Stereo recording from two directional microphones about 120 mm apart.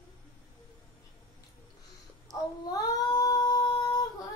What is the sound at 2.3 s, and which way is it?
Female singing, 30° left (ahead or behind).